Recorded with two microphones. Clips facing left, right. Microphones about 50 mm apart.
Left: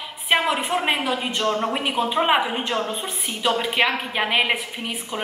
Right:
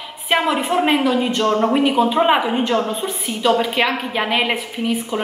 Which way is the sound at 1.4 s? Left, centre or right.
Right.